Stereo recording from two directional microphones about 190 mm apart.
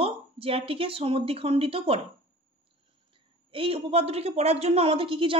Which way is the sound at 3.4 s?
30° right (ahead or behind).